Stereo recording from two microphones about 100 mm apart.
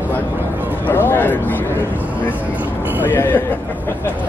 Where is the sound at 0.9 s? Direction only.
20° left (ahead or behind).